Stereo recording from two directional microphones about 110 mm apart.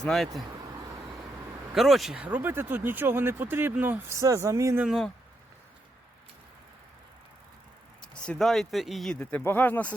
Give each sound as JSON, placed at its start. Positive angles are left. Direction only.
{"t": 0.0, "sound": "speech", "side_deg": 5}
{"t": 1.7, "sound": "speech", "side_deg": 0}
{"t": 2.1, "sound": "speech", "side_deg": -15}
{"t": 4.2, "sound": "speech", "side_deg": -30}
{"t": 8.0, "sound": "speech", "side_deg": 10}
{"t": 9.1, "sound": "speech", "side_deg": 15}